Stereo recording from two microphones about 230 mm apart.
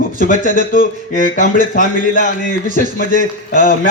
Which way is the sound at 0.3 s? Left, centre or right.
Left.